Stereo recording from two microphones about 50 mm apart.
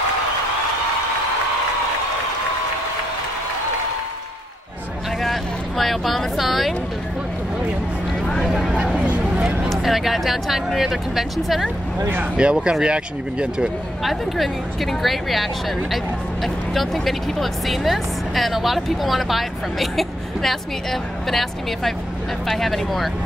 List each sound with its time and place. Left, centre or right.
5.2 s speech: centre
8.5 s speech: centre
8.9 s a sound: right
9.7 s speech: centre
12.4 s speech: centre
14.0 s speech: centre